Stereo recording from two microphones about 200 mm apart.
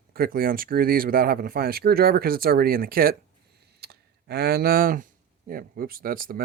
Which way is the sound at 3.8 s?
55° right (ahead or behind).